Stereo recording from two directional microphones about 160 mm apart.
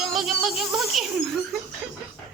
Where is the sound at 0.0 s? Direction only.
Centre (ahead or behind).